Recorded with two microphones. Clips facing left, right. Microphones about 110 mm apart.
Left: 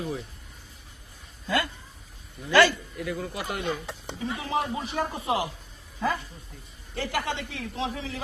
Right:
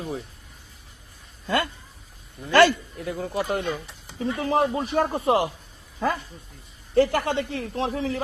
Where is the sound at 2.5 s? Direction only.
55° right (ahead or behind).